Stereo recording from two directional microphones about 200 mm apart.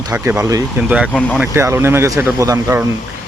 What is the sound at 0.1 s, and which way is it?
Speech, 15° right (ahead or behind).